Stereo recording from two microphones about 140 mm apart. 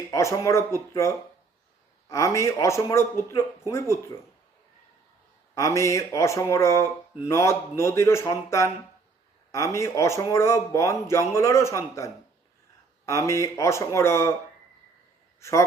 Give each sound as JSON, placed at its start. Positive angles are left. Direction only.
{"t": 0.1, "sound": "speech", "side_deg": 20}
{"t": 5.5, "sound": "speech", "side_deg": 20}
{"t": 15.4, "sound": "a man's voice", "side_deg": 20}